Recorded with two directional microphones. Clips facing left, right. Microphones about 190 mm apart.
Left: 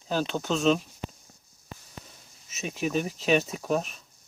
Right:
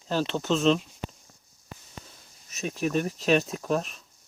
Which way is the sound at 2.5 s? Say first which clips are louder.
Right 1 dB; centre (ahead or behind).